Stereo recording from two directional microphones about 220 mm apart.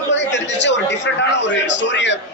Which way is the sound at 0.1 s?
55° left (ahead or behind).